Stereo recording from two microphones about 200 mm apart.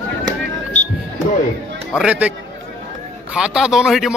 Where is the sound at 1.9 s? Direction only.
5° right (ahead or behind).